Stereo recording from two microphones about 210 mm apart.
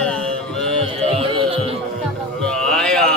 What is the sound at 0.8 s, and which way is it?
Music, 25° right (ahead or behind).